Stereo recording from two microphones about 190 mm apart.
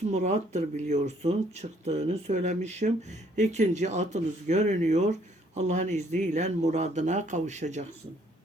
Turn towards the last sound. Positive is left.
turn(degrees=-40)  # may be behind; listen again after turning